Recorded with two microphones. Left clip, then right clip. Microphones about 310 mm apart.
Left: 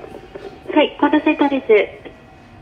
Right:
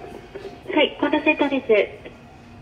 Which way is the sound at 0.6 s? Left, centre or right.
Centre.